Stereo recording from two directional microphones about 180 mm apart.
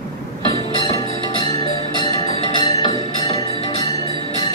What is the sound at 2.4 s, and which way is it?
Music, 25° left (ahead or behind).